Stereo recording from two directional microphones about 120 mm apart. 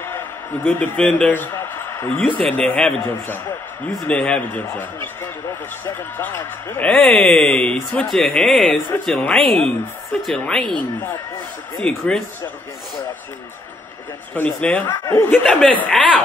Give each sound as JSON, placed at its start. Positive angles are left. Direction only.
{"t": 0.7, "sound": "a man's voice", "side_deg": 10}
{"t": 2.1, "sound": "speech", "side_deg": 10}
{"t": 11.8, "sound": "speech", "side_deg": 5}
{"t": 14.3, "sound": "speech", "side_deg": 15}
{"t": 15.8, "sound": "speech", "side_deg": 10}